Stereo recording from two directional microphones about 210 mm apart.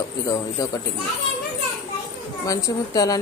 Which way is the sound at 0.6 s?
15° left (ahead or behind).